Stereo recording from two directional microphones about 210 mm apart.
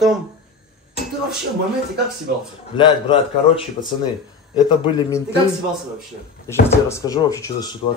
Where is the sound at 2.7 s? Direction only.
25° left (ahead or behind).